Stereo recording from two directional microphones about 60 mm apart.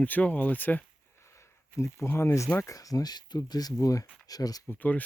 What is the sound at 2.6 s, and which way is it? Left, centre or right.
Speech, left.